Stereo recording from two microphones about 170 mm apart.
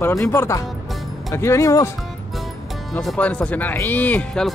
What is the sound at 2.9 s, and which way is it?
Speech, 10° left (ahead or behind).